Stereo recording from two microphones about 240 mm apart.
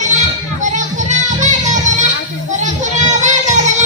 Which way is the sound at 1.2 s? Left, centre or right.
Right.